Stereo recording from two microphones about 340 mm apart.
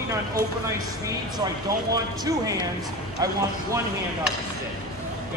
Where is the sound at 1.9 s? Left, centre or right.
Centre.